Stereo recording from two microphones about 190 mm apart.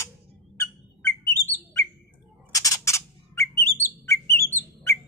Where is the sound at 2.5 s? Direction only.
15° left (ahead or behind).